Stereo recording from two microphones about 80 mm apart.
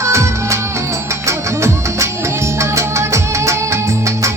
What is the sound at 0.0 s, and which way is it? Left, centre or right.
Music, right.